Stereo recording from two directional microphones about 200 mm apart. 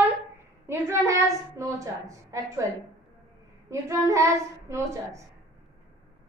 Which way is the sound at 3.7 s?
15° right (ahead or behind).